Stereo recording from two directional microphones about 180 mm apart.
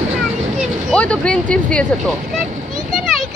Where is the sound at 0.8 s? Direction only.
5° left (ahead or behind).